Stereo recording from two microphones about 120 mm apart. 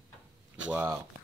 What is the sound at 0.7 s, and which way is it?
Speech, 20° right (ahead or behind).